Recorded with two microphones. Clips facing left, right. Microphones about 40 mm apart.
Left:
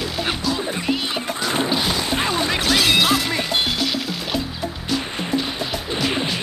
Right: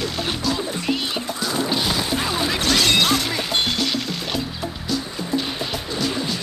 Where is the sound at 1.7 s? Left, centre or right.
Centre.